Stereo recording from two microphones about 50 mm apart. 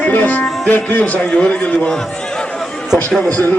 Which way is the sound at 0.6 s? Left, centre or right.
Left.